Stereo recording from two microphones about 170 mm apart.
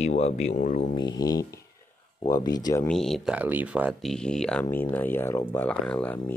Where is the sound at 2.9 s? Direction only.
Centre (ahead or behind).